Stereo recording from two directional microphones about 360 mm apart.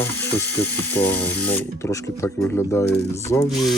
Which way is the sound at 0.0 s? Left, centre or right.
Centre.